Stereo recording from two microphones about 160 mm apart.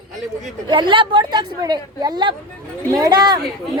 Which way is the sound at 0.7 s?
30° right (ahead or behind).